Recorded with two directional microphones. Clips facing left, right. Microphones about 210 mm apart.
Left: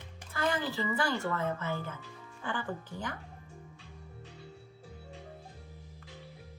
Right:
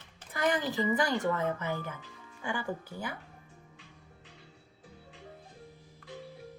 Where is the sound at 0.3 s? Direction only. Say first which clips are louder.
Right 2 dB; 20° right (ahead or behind).